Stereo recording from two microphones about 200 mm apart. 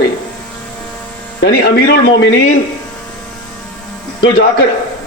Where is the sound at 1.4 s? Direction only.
55° left (ahead or behind).